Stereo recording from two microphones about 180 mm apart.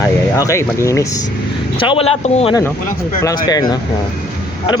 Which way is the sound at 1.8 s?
30° left (ahead or behind).